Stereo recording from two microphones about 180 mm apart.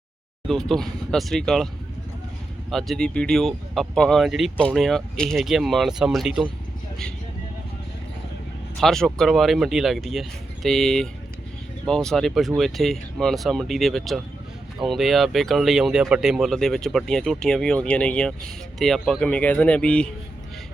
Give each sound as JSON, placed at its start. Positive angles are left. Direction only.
{"t": 0.4, "sound": "speech", "side_deg": 0}
{"t": 8.8, "sound": "speech", "side_deg": 0}